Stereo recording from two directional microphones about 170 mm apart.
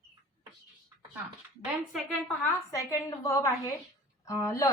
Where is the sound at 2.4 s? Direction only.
15° left (ahead or behind).